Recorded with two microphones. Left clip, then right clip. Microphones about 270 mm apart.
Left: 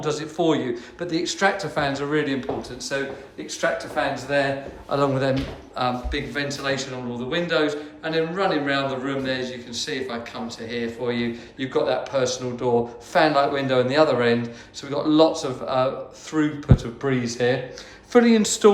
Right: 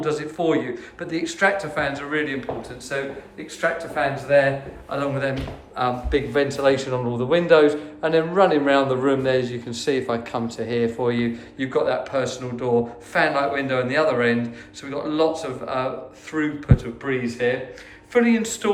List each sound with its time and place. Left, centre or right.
0.0 s speech: centre
5.7 s speech: centre